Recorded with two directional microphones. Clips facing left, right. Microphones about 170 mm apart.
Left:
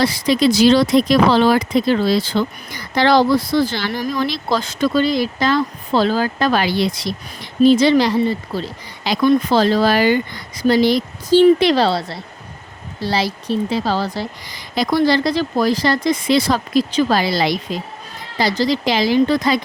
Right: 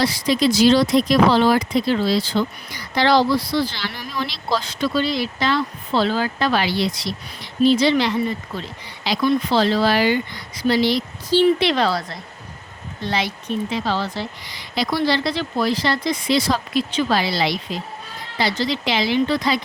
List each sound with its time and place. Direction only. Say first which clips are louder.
0.0 s speech: left 3 dB; 55° left (ahead or behind); by 1.5 s 75° left (ahead or behind)
1.7 s speech: left 3 dB; 50° left (ahead or behind); by 8.7 s 35° left (ahead or behind)
9.0 s speech: left 4 dB; 45° left (ahead or behind)